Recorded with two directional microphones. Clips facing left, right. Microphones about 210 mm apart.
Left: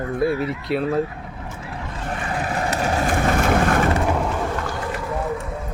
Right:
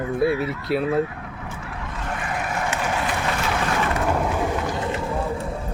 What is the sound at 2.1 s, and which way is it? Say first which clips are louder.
Vehicle: left 2 dB; 35° left (ahead or behind).